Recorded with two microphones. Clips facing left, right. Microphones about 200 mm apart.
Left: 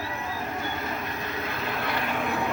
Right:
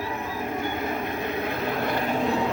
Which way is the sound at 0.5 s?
55° right (ahead or behind).